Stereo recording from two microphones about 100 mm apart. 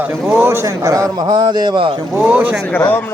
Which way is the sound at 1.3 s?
45° right (ahead or behind).